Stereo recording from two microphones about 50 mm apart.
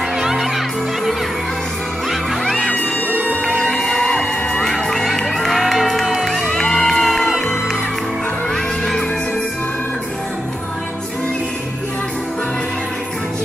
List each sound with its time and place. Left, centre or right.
0.2 s music: centre
2.5 s music: left
4.6 s music: centre